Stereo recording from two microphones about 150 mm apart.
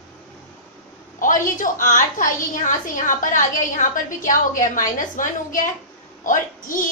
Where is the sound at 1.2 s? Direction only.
60° left (ahead or behind).